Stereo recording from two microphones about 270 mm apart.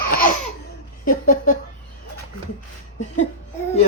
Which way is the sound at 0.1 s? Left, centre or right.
Left.